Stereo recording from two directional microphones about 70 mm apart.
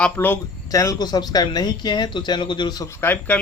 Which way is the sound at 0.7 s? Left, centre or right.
Left.